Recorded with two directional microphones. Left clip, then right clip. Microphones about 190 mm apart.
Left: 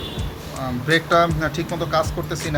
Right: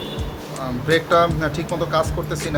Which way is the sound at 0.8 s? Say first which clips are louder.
Right 1 dB; centre (ahead or behind).